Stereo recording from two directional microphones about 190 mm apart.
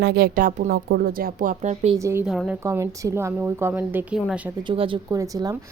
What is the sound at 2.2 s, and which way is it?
Speech, centre (ahead or behind).